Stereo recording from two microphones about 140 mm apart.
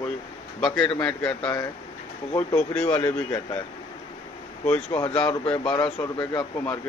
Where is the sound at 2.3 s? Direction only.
15° left (ahead or behind).